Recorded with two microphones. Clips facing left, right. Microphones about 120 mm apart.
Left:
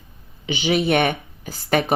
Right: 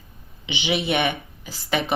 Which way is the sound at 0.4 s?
45° left (ahead or behind).